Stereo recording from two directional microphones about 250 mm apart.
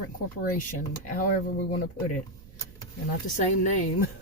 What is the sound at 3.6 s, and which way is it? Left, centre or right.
Speech, left.